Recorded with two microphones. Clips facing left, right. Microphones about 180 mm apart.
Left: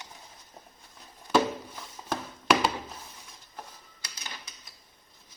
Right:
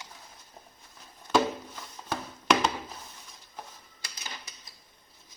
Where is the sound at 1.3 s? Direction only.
10° left (ahead or behind).